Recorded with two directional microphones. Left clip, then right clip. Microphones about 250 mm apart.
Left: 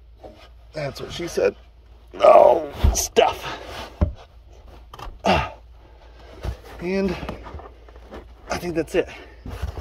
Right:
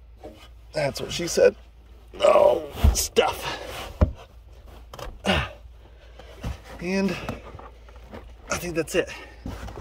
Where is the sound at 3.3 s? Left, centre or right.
Centre.